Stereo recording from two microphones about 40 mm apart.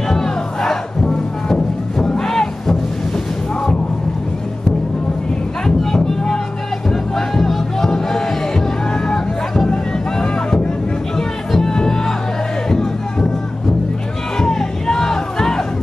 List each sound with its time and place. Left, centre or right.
0.1 s music: centre
5.8 s a sound: centre
6.9 s music: centre
11.1 s music: centre
14.4 s music: centre